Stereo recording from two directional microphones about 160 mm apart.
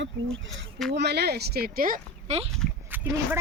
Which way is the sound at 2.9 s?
10° right (ahead or behind).